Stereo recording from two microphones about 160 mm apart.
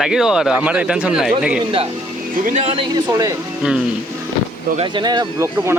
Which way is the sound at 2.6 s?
35° right (ahead or behind).